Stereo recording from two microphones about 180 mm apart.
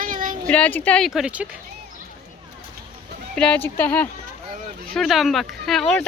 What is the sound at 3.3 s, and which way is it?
Speech, 5° left (ahead or behind).